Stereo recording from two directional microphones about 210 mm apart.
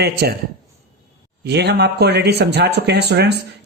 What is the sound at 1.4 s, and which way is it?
Speech, 55° right (ahead or behind).